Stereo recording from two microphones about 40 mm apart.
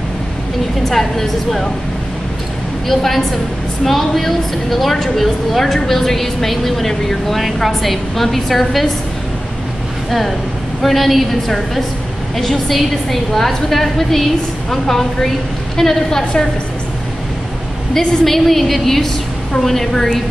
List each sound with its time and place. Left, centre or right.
0.8 s a woman's voice: centre
2.9 s a woman's voice: centre
10.8 s a woman's voice: centre
17.9 s a woman's voice: centre